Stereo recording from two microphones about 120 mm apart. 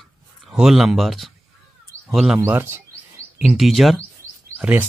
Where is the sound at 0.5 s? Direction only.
5° right (ahead or behind).